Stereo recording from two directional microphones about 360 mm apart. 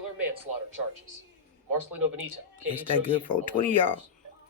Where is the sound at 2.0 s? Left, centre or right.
Right.